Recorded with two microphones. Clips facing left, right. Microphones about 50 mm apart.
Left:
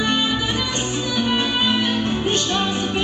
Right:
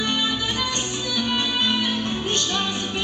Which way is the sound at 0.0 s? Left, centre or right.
Left.